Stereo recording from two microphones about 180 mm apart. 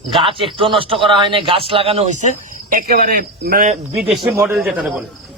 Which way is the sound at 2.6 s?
50° right (ahead or behind).